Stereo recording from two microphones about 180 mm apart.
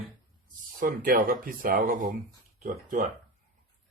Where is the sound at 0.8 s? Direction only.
55° right (ahead or behind).